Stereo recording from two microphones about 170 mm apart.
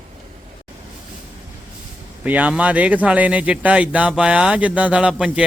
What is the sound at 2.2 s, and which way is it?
Speech, 10° right (ahead or behind).